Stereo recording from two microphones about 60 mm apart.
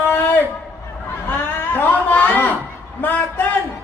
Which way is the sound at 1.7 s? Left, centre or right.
Left.